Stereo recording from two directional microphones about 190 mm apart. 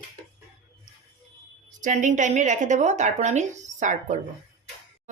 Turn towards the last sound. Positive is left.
turn(degrees=-40)  # may be behind; listen again after turning